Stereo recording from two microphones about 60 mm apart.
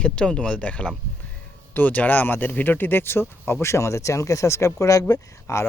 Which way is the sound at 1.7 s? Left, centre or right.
Left.